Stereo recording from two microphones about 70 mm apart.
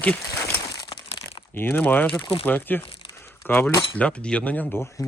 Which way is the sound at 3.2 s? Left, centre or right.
Left.